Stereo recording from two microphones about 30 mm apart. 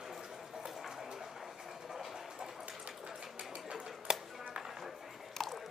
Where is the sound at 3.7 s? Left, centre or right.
Right.